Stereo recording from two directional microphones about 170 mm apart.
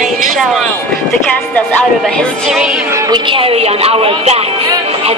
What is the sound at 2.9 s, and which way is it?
Speech, 25° right (ahead or behind).